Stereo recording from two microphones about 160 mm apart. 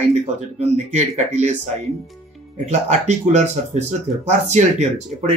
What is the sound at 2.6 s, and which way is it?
Speech, 45° right (ahead or behind).